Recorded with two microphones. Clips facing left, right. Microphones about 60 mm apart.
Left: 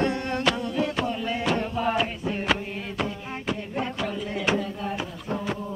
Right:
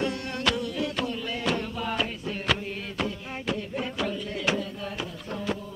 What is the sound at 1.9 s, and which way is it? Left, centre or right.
Music, centre.